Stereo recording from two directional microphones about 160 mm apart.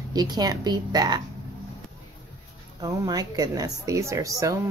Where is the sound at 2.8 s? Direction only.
25° right (ahead or behind).